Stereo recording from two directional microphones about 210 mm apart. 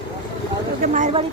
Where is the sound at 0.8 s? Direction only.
35° right (ahead or behind).